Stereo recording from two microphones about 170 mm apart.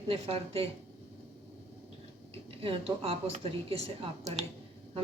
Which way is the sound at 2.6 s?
35° right (ahead or behind).